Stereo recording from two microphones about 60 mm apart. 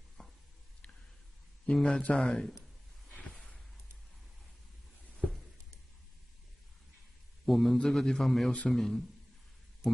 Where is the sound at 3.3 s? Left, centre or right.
Centre.